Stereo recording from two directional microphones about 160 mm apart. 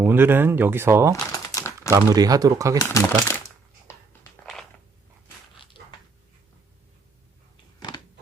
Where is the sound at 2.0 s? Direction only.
25° right (ahead or behind).